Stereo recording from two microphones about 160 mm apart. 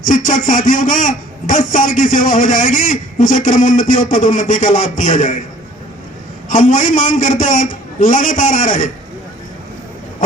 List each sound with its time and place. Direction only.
0.0 s a man's voice: 55° left (ahead or behind)
6.5 s a man's voice: 50° left (ahead or behind)